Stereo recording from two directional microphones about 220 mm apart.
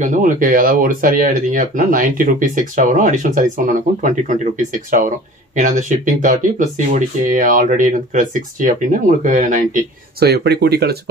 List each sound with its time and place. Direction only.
0.0 s speech: 35° right (ahead or behind)
10.2 s speech: 50° right (ahead or behind)